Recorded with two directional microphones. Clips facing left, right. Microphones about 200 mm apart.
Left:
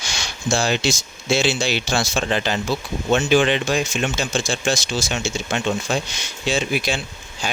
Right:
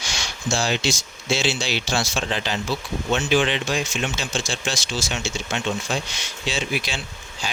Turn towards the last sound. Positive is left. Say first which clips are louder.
# left 3 dB
turn(degrees=50)  # may be behind; listen again after turning